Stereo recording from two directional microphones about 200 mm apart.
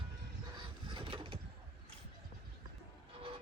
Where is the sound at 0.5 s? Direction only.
25° right (ahead or behind).